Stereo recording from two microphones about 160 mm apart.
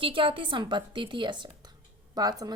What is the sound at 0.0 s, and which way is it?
A woman's voice, 30° right (ahead or behind).